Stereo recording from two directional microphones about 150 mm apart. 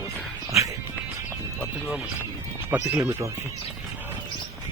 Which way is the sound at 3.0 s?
20° right (ahead or behind).